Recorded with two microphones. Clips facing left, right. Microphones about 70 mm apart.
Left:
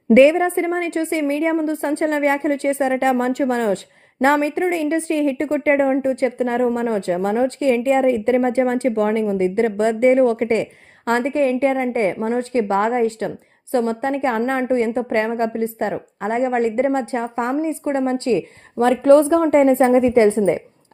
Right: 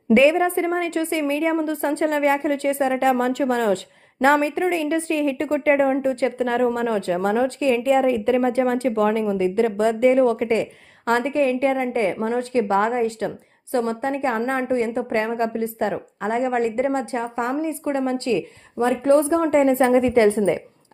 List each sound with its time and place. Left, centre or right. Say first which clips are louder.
0.3 s a woman's voice: left 1 dB; left
5.5 s a woman's voice: even; left
18.8 s speech: left 5 dB; left
19.4 s a woman's voice: left 3 dB; left
19.7 s a woman's voice: left 3 dB; left